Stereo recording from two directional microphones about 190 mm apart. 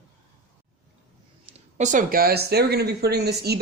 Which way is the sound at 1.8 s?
45° right (ahead or behind).